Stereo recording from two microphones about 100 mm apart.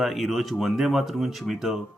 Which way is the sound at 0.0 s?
Centre (ahead or behind).